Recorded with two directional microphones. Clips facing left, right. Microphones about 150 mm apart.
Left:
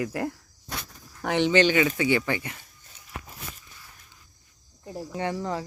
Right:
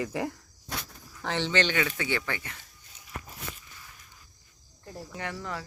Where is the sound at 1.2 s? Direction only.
15° left (ahead or behind).